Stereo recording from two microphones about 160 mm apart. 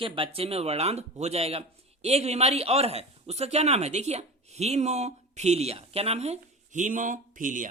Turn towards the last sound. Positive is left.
turn(degrees=-55)  # may be behind; listen again after turning